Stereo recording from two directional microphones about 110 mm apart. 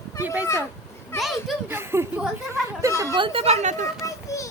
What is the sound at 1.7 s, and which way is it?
Speech, 20° right (ahead or behind).